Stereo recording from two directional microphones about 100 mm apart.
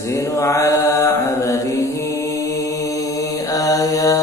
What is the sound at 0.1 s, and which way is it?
Mantra, 30° left (ahead or behind).